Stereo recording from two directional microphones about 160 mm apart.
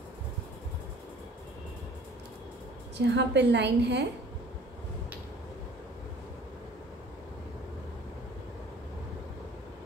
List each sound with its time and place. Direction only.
3.1 s a woman's voice: 90° right